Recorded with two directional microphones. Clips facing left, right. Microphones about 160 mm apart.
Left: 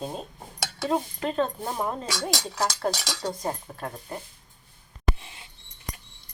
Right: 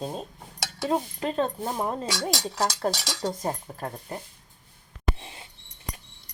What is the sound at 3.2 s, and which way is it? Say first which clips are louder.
Cutlery: right 2 dB; 20° right (ahead or behind).